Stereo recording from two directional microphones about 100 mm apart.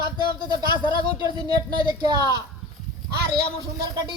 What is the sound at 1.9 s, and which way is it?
Speech, 45° right (ahead or behind).